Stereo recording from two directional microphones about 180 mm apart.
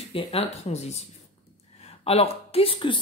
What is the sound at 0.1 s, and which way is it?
Speech, 30° left (ahead or behind).